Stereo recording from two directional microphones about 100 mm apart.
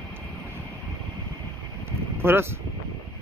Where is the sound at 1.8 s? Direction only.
25° right (ahead or behind).